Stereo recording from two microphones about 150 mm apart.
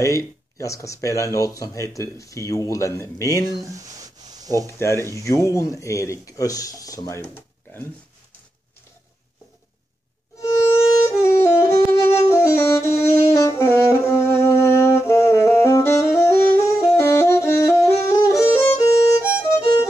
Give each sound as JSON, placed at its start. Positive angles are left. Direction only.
{"t": 0.0, "sound": "speech", "side_deg": 20}
{"t": 3.7, "sound": "a sound", "side_deg": -25}
{"t": 4.6, "sound": "speech", "side_deg": 20}
{"t": 10.4, "sound": "music", "side_deg": 20}
{"t": 13.3, "sound": "saxophone", "side_deg": 20}